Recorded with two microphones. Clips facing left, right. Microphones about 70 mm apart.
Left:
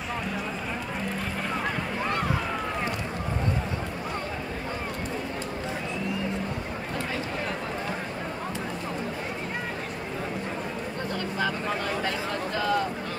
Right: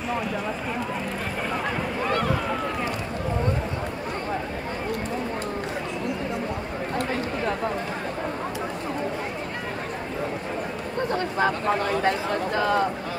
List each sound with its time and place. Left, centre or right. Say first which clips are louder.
11.1 s speech: right 6 dB; right